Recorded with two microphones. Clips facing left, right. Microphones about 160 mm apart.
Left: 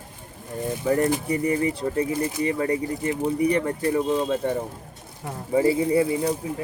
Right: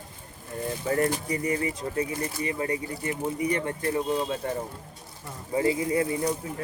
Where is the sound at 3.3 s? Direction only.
35° left (ahead or behind).